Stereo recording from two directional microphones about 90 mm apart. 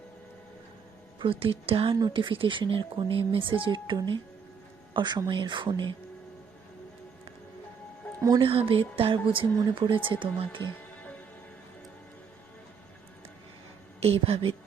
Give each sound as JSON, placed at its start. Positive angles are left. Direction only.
{"t": 1.2, "sound": "speech", "side_deg": -85}
{"t": 2.0, "sound": "speech", "side_deg": -55}
{"t": 3.9, "sound": "speech", "side_deg": -55}
{"t": 8.4, "sound": "speech", "side_deg": -85}
{"t": 10.9, "sound": "music", "side_deg": 15}
{"t": 14.0, "sound": "speech", "side_deg": -90}